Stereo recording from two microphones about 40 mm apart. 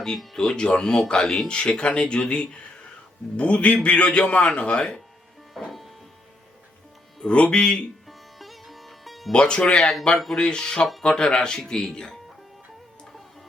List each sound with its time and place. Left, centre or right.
0.3 s a man's voice: centre
5.6 s music: centre
7.3 s a man's voice: left
8.0 s sitar: centre
9.3 s a man's voice: left